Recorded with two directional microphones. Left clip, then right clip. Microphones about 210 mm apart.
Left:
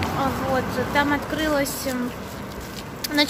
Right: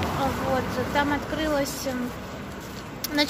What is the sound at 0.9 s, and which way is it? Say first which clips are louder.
Speech: left 3 dB; 5° left (ahead or behind).